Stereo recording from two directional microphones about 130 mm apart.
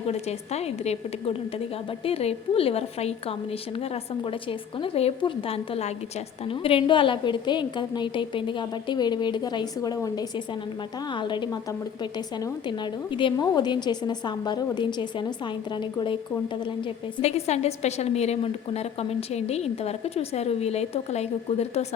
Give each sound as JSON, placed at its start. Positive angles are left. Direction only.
{"t": 0.1, "sound": "a woman's voice", "side_deg": 55}
{"t": 4.2, "sound": "a woman's voice", "side_deg": 40}
{"t": 17.2, "sound": "a woman's voice", "side_deg": 55}